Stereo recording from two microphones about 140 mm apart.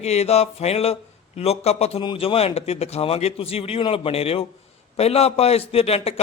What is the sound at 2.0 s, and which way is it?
A man's voice, 35° left (ahead or behind).